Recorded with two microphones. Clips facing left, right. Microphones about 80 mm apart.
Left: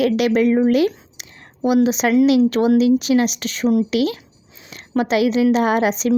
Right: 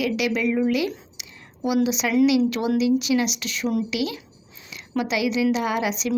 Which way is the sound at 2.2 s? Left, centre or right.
Left.